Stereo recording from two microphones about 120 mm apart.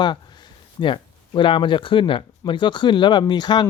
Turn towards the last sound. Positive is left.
turn(degrees=35)  # may be behind; listen again after turning